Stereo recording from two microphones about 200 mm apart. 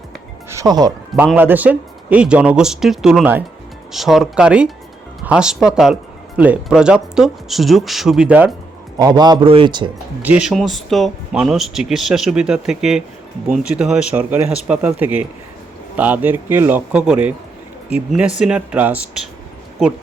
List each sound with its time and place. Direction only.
0.5 s speech: 20° right (ahead or behind)
1.1 s speech: 5° right (ahead or behind)
9.0 s a man's voice: 20° right (ahead or behind)
10.2 s speech: 5° right (ahead or behind)